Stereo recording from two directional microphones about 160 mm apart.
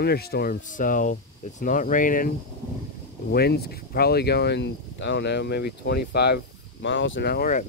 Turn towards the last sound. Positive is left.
turn(degrees=60)  # may be behind; listen again after turning